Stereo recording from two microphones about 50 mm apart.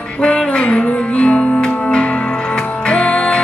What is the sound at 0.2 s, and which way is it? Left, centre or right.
Music, left.